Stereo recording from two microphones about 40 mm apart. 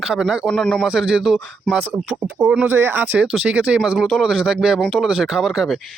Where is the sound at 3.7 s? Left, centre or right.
Centre.